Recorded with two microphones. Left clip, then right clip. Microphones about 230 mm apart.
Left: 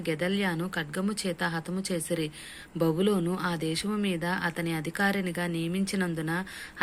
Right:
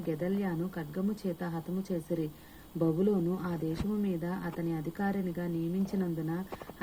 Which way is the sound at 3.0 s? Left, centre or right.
Centre.